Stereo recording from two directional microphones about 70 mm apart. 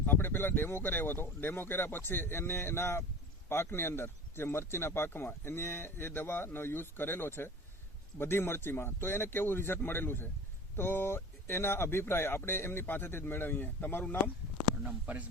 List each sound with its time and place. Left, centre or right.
0.0 s speech: left
14.8 s speech: right